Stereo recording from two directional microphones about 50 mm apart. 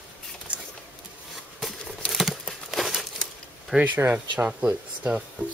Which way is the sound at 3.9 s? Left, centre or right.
Right.